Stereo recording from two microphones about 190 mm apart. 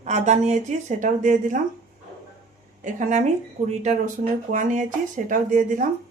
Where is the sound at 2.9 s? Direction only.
45° right (ahead or behind).